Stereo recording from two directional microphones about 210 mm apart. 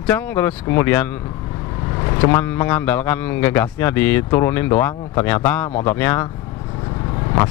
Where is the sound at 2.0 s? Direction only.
25° left (ahead or behind).